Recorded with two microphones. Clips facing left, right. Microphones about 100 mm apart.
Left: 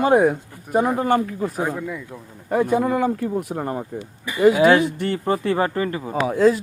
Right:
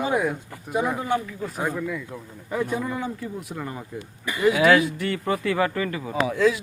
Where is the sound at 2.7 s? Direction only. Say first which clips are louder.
Left 8 dB; 55° left (ahead or behind); by 6.1 s 30° left (ahead or behind).